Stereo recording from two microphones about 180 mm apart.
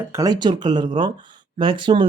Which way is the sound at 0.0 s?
15° right (ahead or behind).